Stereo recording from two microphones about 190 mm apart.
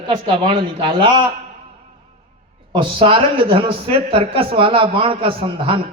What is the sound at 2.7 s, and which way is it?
A man's voice, 25° right (ahead or behind).